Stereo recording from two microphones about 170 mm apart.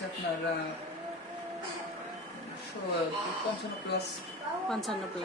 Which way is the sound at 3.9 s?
80° left.